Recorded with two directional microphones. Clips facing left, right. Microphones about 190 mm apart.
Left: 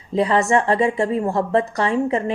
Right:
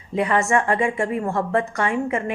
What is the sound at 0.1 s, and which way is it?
A woman's voice, 35° left (ahead or behind).